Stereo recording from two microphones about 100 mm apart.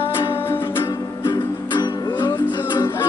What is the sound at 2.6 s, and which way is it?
Music, 45° left (ahead or behind).